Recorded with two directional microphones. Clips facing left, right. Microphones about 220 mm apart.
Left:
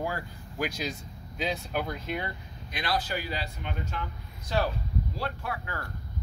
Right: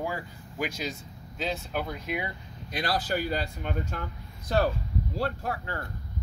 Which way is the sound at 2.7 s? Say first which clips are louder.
Right 2 dB; 45° right (ahead or behind).